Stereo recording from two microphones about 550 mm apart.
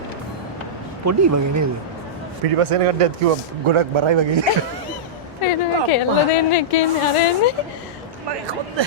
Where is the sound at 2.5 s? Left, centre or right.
Right.